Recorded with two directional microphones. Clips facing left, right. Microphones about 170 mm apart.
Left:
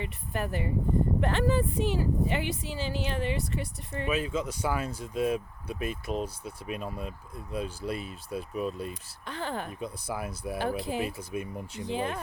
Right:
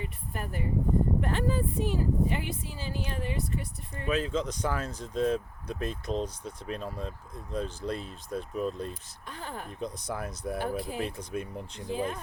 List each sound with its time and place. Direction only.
0.0 s speech: 80° left
4.1 s speech: 10° left (ahead or behind)
8.9 s speech: 80° left
9.8 s speech: 5° left (ahead or behind)
10.6 s speech: 85° left
11.0 s speech: 5° left (ahead or behind)
11.9 s speech: 75° left (ahead or behind)